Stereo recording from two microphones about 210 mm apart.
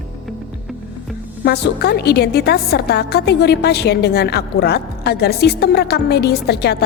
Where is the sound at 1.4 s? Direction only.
50° left (ahead or behind).